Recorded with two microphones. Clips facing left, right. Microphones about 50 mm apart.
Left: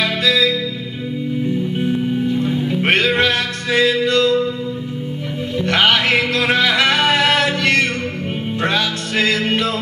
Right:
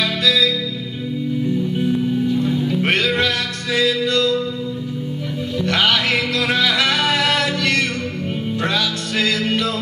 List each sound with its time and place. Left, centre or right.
0.0 s music: left
1.8 s music: left
5.6 s music: left